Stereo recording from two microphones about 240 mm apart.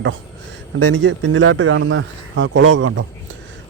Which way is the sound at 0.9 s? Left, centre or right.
Right.